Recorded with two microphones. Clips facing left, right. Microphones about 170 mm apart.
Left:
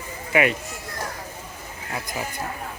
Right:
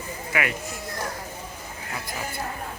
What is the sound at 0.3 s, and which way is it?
Speech, 20° left (ahead or behind).